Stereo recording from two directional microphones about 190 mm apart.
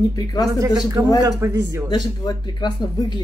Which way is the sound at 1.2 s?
15° right (ahead or behind).